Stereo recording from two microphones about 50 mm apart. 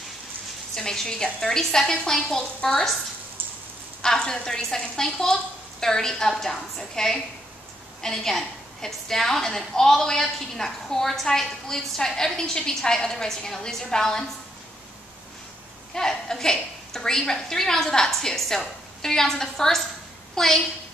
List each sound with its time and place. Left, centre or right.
0.7 s a woman's voice: centre
4.0 s a woman's voice: centre
15.9 s a woman's voice: centre